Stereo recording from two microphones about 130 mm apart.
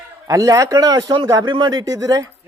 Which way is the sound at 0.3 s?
25° right (ahead or behind).